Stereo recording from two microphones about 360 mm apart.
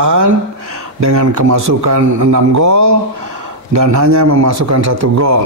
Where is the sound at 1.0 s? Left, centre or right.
Right.